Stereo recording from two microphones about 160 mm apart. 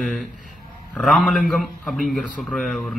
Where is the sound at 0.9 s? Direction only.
Centre (ahead or behind).